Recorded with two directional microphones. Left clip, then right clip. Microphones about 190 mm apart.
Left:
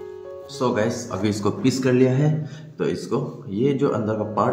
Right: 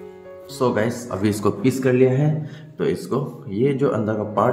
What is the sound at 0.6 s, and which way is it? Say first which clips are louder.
Speech: right 1 dB; 30° right (ahead or behind).